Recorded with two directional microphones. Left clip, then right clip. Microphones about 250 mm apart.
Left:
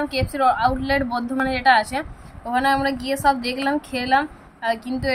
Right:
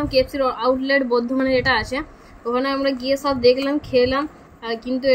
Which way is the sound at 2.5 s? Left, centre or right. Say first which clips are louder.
Left 1 dB; left.